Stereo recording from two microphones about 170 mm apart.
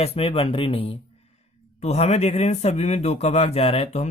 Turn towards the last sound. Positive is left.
turn(degrees=40)  # may be behind; listen again after turning